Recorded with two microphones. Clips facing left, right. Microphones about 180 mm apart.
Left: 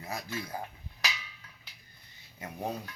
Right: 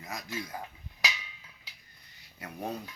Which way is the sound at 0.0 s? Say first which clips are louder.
Left 2 dB; 30° left (ahead or behind).